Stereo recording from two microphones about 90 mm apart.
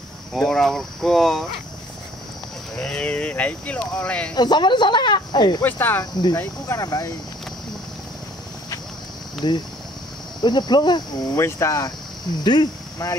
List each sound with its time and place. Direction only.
0.3 s speech: 5° left (ahead or behind)
2.8 s speech: 10° left (ahead or behind)
4.4 s speech: 55° left (ahead or behind)
5.6 s speech: 20° left (ahead or behind)
6.8 s speech: 40° left (ahead or behind)
9.4 s speech: 55° left (ahead or behind)
11.3 s speech: 30° left (ahead or behind)
12.4 s speech: 55° left (ahead or behind)